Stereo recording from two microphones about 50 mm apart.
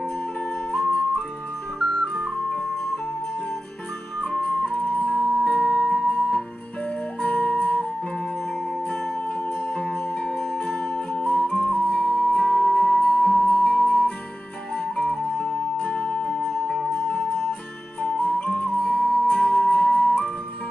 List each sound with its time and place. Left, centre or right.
1.9 s music: centre
4.4 s music: left
7.2 s flute: left
8.8 s music: centre
11.4 s flute: left
11.7 s music: centre
16.5 s music: centre
17.1 s music: left
18.8 s music: centre
19.3 s flute: left